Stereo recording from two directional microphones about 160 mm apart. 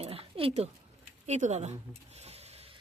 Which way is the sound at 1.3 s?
45° right (ahead or behind).